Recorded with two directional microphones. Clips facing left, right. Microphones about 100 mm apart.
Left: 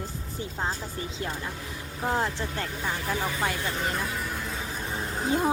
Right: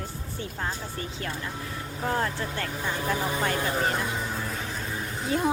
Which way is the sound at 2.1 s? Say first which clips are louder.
Even; 15° left (ahead or behind).